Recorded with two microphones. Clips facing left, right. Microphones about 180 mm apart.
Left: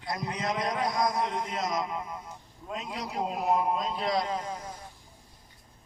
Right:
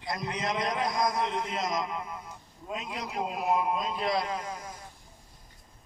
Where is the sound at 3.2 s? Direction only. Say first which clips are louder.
Left 1 dB; 5° right (ahead or behind).